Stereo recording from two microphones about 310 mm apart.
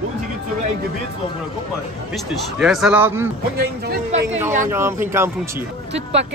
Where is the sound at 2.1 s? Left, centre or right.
Centre.